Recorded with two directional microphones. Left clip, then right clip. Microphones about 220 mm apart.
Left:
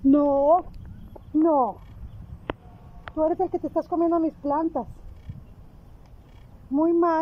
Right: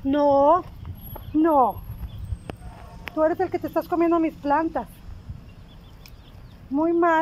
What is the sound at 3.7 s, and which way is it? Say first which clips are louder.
Speech: right 3 dB; 10° right (ahead or behind).